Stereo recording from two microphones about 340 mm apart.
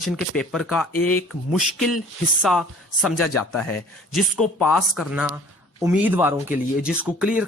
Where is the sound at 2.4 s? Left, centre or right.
Centre.